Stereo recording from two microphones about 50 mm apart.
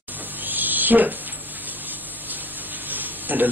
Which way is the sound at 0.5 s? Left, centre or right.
Right.